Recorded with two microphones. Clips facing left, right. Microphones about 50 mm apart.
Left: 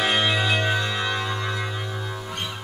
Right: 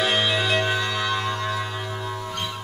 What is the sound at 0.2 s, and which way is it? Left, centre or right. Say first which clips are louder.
Music: even; centre.